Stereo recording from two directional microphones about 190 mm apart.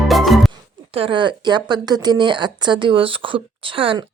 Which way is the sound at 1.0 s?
25° right (ahead or behind).